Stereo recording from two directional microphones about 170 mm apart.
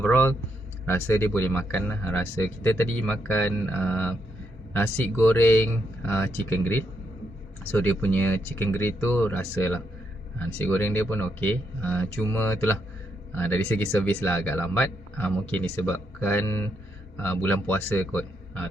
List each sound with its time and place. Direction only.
0.0 s speech: 10° left (ahead or behind)